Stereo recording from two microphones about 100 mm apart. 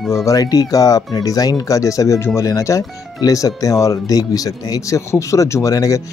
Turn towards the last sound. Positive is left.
turn(degrees=35)  # may be behind; listen again after turning